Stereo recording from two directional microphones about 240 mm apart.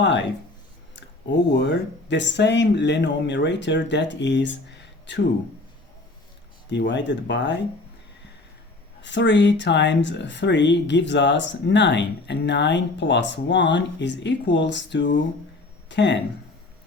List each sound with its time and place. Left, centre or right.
1.5 s speech: left
6.7 s speech: left
9.0 s speech: left